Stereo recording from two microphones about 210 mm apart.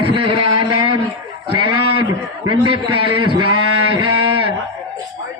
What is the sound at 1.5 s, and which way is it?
Speech, 90° right.